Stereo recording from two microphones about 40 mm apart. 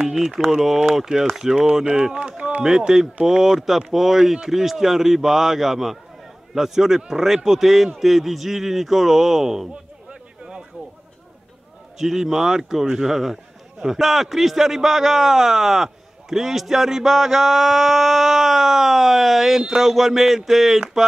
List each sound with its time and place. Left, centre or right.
0.0 s speech: centre
2.1 s run: right
2.9 s speech: centre
12.0 s speech: centre